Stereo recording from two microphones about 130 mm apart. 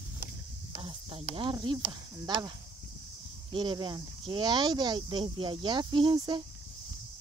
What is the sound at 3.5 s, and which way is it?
Speech, 35° right (ahead or behind).